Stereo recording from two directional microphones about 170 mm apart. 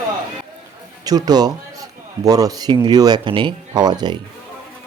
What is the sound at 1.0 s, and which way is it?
A man's voice, 25° right (ahead or behind).